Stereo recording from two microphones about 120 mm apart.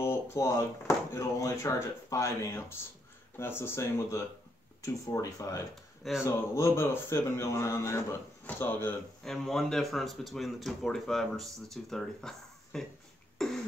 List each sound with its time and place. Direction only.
0.0 s speech: 20° left (ahead or behind)
9.2 s speech: 5° left (ahead or behind)
13.4 s throat clearing: 5° left (ahead or behind)